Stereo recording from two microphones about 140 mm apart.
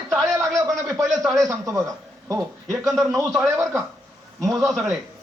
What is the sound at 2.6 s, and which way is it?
Speech, centre (ahead or behind).